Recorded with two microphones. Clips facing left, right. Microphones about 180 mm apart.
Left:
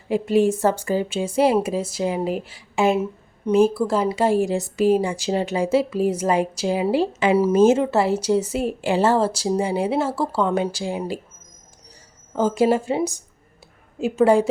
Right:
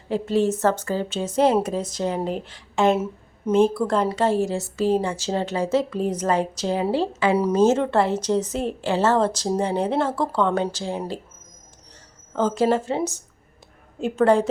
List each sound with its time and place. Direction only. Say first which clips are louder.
0.1 s a woman's voice: left 3 dB; 10° left (ahead or behind)
12.3 s a woman's voice: left 2 dB; 10° left (ahead or behind)